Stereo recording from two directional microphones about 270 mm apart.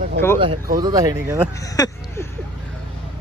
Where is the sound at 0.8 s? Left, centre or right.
Centre.